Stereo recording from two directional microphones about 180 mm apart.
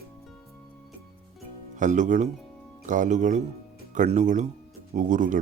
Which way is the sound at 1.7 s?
45° right (ahead or behind).